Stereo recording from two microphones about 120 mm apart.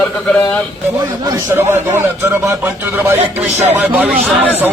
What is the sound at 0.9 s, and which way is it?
Speech, 30° right (ahead or behind).